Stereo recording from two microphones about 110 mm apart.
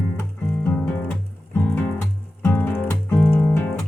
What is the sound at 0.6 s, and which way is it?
Music, 15° left (ahead or behind).